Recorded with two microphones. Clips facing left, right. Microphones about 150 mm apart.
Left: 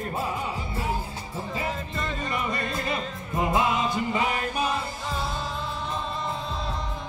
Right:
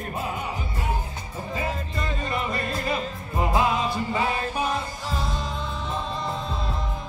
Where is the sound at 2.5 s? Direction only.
Centre (ahead or behind).